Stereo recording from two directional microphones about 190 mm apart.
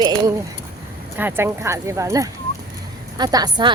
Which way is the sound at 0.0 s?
20° right (ahead or behind).